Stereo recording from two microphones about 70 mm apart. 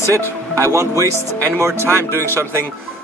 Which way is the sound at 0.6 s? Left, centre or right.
Right.